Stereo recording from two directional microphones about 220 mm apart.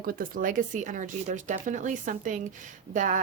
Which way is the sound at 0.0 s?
40° right (ahead or behind).